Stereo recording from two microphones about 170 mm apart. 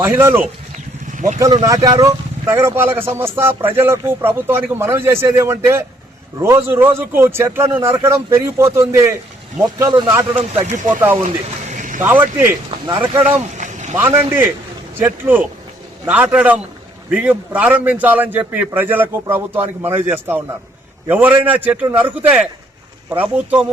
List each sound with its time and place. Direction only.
0.0 s speech: 15° right (ahead or behind)
0.7 s vehicle: 45° right (ahead or behind)
1.6 s speech: 20° right (ahead or behind)
10.5 s speech: 45° right (ahead or behind)
11.7 s a sound: 50° right (ahead or behind)
12.0 s speech: 10° right (ahead or behind)
13.6 s vehicle: 45° right (ahead or behind)
13.9 s speech: 15° right (ahead or behind)